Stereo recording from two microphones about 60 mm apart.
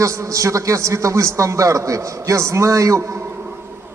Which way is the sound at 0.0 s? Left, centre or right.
Right.